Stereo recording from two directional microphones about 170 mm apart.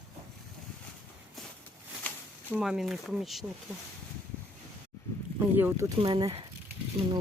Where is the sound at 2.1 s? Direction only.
10° left (ahead or behind).